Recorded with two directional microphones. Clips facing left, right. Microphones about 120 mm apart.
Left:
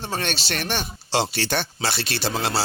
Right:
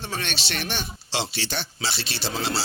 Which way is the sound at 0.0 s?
40° left (ahead or behind).